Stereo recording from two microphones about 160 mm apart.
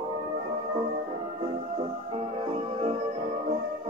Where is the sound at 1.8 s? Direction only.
35° right (ahead or behind).